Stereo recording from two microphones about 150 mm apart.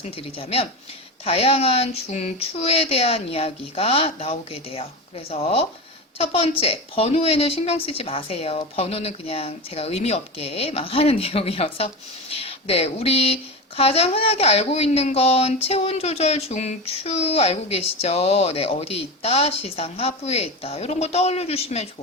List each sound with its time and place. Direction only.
0.0 s a woman's voice: 40° left (ahead or behind)